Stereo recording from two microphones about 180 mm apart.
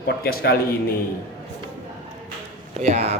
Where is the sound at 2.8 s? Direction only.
35° right (ahead or behind).